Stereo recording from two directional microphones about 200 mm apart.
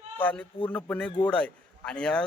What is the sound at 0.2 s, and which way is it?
A man's voice, 10° left (ahead or behind).